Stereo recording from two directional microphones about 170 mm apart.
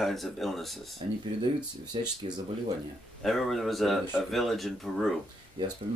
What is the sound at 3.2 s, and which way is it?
Speech, centre (ahead or behind).